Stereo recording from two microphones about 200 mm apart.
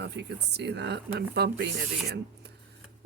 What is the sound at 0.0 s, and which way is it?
Speech, 55° right (ahead or behind).